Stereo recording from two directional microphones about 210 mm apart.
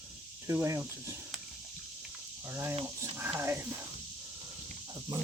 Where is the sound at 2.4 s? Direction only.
10° right (ahead or behind).